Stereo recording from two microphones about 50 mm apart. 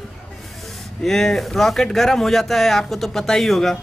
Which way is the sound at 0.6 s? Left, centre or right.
Centre.